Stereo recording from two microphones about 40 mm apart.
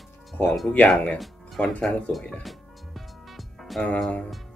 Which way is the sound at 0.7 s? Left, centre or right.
Left.